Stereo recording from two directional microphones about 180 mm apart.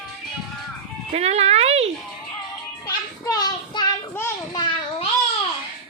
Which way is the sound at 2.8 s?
20° left (ahead or behind).